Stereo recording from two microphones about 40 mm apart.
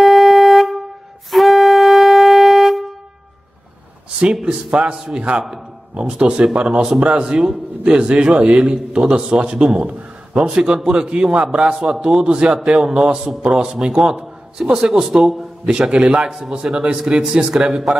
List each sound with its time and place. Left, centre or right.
0.0 s vehicle horn: centre
1.3 s wind instrument: centre
4.5 s a man's voice: right
8.5 s speech: centre
8.9 s a man's voice: right
10.9 s a man's voice: right
12.5 s speech: centre
12.9 s a man's voice: right; by 15.4 s centre
15.6 s a man's voice: right
16.3 s a man's voice: centre